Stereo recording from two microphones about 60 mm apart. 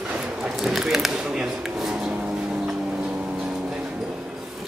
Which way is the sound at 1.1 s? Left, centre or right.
Centre.